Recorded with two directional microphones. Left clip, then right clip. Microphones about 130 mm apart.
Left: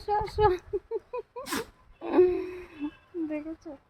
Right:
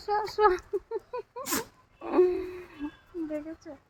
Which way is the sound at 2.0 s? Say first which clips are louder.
Left 1 dB; 30° left (ahead or behind).